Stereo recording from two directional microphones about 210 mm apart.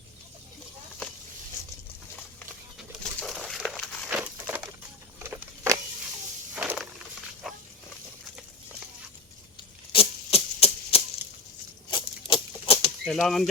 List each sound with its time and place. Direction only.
2.7 s bird: centre (ahead or behind)
5.2 s a sound: 15° right (ahead or behind)
6.6 s wild animals: 5° right (ahead or behind)
7.4 s dog: centre (ahead or behind)
9.9 s typewriter: 30° left (ahead or behind)
11.9 s a sound: 25° left (ahead or behind)
13.1 s speech: centre (ahead or behind)